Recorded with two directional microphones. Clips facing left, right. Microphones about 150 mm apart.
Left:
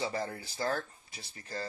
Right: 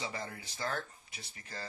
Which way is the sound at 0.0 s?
35° left (ahead or behind).